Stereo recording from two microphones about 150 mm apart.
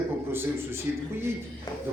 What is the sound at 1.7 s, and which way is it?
Music, 25° left (ahead or behind).